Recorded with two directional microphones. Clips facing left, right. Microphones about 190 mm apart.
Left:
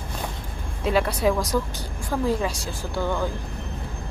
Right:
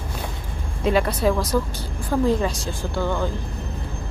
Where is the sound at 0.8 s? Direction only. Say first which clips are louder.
Right 2 dB; 5° left (ahead or behind).